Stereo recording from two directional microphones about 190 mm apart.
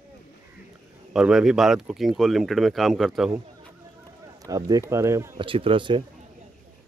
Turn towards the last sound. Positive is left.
turn(degrees=-25)  # may be behind; listen again after turning